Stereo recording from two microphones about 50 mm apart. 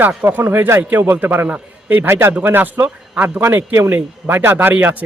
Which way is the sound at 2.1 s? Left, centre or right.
Right.